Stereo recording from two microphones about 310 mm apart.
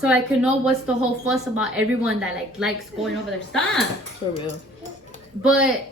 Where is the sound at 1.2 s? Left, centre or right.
Centre.